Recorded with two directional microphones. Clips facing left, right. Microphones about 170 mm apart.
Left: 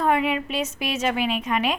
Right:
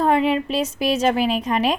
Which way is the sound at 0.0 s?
30° right (ahead or behind).